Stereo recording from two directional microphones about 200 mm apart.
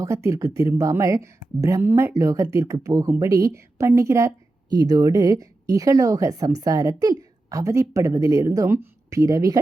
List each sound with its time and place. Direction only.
0.0 s speech: 15° right (ahead or behind)